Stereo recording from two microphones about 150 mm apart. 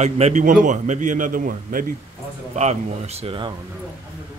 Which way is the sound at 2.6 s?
45° right (ahead or behind).